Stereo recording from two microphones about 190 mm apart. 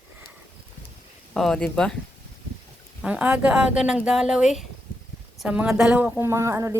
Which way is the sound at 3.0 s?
5° right (ahead or behind).